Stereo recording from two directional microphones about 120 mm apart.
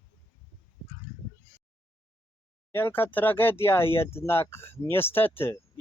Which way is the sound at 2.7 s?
15° left (ahead or behind).